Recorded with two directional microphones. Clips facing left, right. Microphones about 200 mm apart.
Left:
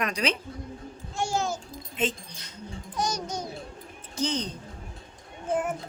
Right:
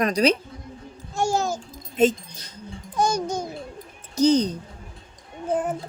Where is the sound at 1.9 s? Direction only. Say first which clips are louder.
Right 10 dB; 40° right (ahead or behind).